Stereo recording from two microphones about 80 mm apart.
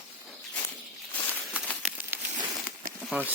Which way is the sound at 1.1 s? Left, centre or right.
Centre.